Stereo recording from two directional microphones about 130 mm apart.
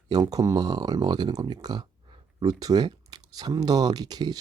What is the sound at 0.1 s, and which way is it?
Speech, 30° right (ahead or behind).